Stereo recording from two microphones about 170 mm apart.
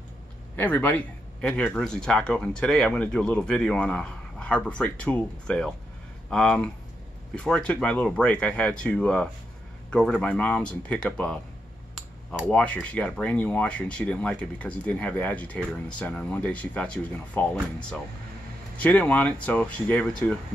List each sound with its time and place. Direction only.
0.6 s speech: 10° left (ahead or behind)
12.4 s speech: 5° left (ahead or behind)
18.8 s speech: 10° left (ahead or behind)